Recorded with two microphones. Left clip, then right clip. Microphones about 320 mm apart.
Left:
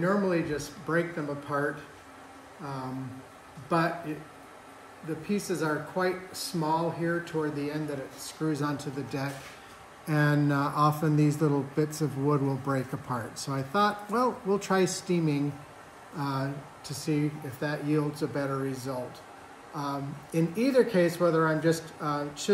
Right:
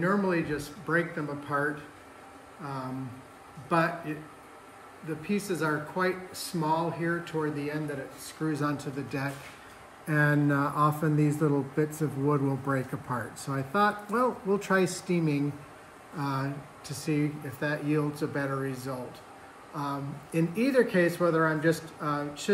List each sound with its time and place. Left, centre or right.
0.0 s speech: centre